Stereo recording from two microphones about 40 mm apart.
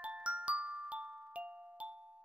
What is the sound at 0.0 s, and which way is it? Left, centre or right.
Glockenspiel, right.